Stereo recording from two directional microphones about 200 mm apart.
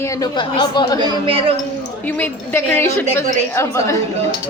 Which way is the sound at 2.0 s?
10° left (ahead or behind).